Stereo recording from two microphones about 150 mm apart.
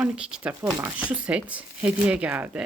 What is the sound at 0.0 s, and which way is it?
Speech, 5° right (ahead or behind).